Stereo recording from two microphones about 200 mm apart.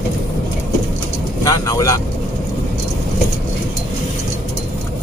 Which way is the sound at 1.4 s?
15° left (ahead or behind).